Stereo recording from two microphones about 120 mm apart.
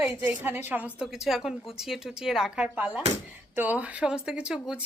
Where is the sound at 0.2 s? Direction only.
20° right (ahead or behind).